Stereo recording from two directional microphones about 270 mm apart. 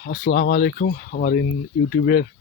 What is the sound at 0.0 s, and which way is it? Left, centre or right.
Speech, left.